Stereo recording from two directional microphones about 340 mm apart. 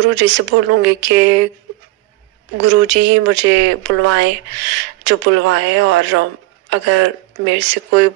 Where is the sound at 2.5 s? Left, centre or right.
Right.